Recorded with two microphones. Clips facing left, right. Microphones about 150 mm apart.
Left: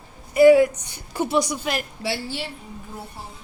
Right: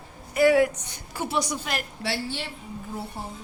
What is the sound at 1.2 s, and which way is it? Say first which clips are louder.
A woman's voice: left 5 dB; 15° left (ahead or behind).